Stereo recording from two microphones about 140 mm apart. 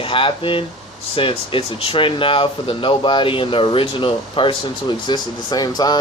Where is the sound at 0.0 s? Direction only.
40° left (ahead or behind).